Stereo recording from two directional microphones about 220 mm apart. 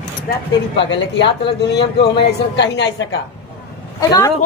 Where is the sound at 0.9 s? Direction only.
55° left (ahead or behind).